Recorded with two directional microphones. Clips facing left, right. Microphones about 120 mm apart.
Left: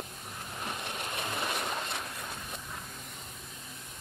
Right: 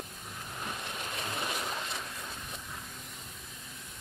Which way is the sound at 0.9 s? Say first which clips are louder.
Left 2 dB; 60° left (ahead or behind).